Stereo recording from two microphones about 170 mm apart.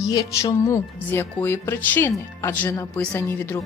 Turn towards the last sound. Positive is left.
turn(degrees=15)  # may be behind; listen again after turning